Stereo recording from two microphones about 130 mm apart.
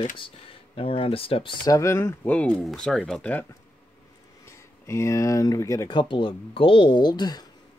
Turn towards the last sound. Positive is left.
turn(degrees=30)  # may be behind; listen again after turning